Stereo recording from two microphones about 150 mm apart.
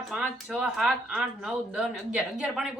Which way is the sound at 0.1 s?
5° right (ahead or behind).